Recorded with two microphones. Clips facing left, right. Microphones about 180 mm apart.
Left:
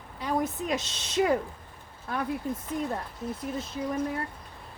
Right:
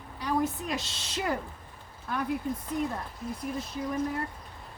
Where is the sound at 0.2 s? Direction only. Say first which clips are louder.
Even; 20° left (ahead or behind).